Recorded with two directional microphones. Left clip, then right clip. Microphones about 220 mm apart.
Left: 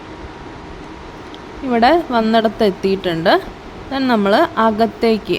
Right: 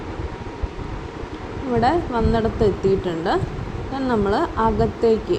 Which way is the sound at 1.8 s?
30° left (ahead or behind).